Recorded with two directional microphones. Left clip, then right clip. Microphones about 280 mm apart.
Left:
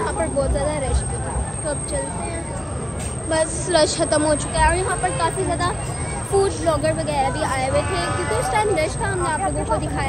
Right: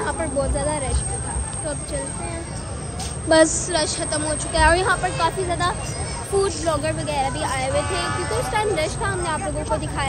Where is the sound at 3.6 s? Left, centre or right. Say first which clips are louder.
Left 5 dB; centre.